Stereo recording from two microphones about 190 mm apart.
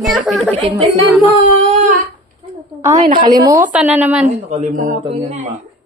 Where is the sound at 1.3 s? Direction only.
35° right (ahead or behind).